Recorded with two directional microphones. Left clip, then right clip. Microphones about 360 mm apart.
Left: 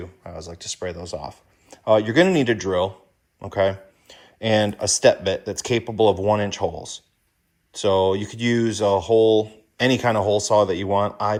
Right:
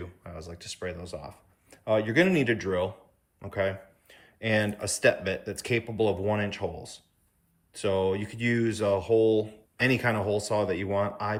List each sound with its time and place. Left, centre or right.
0.0 s speech: centre